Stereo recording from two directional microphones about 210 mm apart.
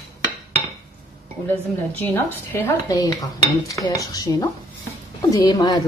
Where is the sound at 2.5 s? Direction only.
15° left (ahead or behind).